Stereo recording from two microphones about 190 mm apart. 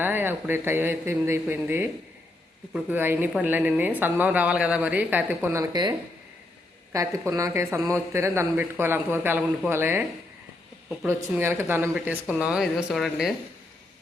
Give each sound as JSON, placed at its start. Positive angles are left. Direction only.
{"t": 0.0, "sound": "a woman's voice", "side_deg": -10}
{"t": 6.9, "sound": "a woman's voice", "side_deg": -15}
{"t": 11.0, "sound": "a woman's voice", "side_deg": -10}